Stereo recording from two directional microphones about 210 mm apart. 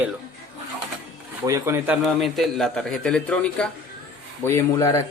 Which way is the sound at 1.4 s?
15° right (ahead or behind).